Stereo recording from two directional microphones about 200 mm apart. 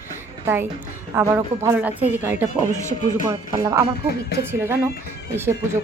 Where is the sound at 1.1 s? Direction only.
15° right (ahead or behind).